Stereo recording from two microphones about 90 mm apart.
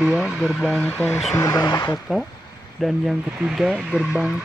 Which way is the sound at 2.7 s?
Centre (ahead or behind).